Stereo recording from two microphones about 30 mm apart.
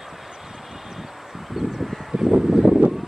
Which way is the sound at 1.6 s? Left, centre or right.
Centre.